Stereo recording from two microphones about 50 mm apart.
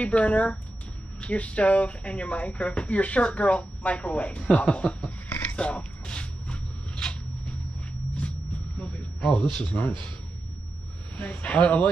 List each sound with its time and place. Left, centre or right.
0.0 s speech: left
5.6 s a sound: left
8.7 s a man's voice: left
11.1 s speech: left